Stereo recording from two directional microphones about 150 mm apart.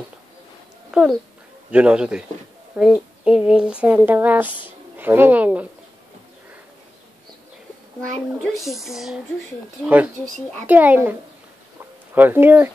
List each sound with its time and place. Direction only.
0.9 s speech: 5° right (ahead or behind)
4.5 s speech: 35° left (ahead or behind)
4.9 s speech: 15° right (ahead or behind)
8.6 s speech: centre (ahead or behind)